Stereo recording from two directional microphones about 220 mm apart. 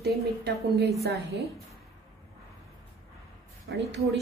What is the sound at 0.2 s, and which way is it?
Speech, 45° right (ahead or behind).